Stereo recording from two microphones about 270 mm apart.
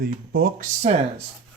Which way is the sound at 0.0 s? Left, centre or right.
Right.